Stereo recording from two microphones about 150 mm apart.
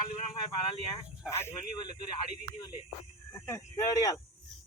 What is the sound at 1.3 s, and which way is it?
Speech, 15° left (ahead or behind).